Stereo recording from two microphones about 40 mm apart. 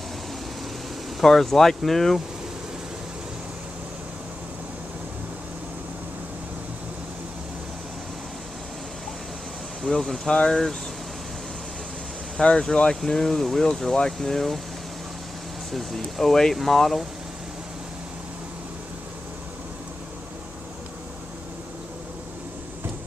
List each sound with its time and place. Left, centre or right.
1.2 s speech: centre
9.8 s speech: centre
10.2 s speech: left
10.5 s speech: centre
12.4 s speech: centre
16.0 s speech: centre